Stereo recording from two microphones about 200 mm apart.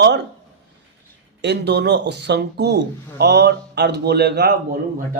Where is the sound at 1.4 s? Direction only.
55° right (ahead or behind).